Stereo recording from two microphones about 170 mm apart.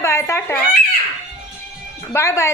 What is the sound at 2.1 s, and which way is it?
Speech, 15° left (ahead or behind).